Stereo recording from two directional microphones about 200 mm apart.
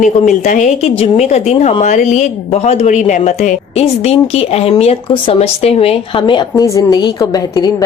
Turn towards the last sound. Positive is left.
turn(degrees=20)  # may be behind; listen again after turning